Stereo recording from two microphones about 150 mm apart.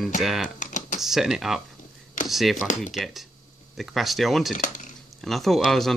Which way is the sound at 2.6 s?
55° left (ahead or behind).